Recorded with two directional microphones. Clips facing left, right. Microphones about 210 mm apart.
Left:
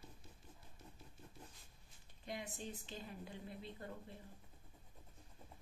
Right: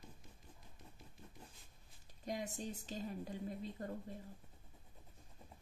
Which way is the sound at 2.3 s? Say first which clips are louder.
Right 4 dB; 40° right (ahead or behind).